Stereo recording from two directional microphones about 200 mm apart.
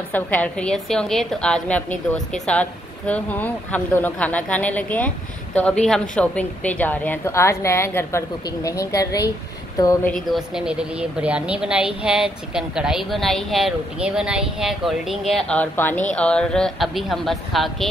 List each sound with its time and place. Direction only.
0.1 s a woman's voice: 5° left (ahead or behind)
10.1 s a woman's voice: centre (ahead or behind)